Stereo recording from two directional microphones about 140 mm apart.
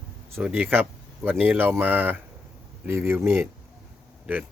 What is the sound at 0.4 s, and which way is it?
Speech, 15° right (ahead or behind).